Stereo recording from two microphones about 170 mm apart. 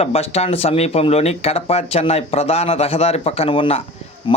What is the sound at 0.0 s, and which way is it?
Speech, 35° left (ahead or behind).